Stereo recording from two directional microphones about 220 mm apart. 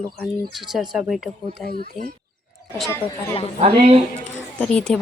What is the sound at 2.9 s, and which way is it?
Speech, 10° left (ahead or behind).